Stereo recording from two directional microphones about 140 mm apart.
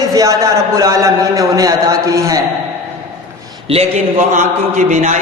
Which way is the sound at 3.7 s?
50° right (ahead or behind).